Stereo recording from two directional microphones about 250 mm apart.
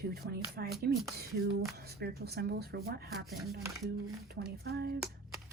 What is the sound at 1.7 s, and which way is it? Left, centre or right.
A woman's voice, right.